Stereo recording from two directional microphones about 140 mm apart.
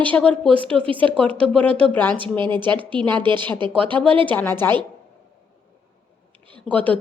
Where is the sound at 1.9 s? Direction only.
15° left (ahead or behind).